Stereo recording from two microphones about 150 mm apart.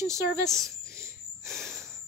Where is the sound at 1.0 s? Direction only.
20° right (ahead or behind).